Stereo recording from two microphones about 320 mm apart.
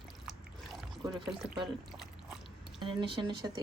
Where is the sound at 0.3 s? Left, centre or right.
Centre.